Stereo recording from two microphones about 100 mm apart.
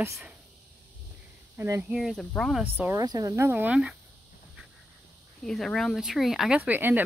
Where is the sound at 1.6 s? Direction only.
25° right (ahead or behind).